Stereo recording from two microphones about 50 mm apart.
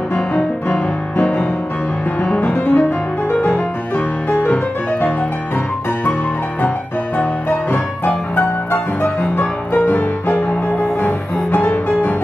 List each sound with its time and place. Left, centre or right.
0.1 s music: left
4.3 s music: left
7.2 s music: left
9.8 s music: left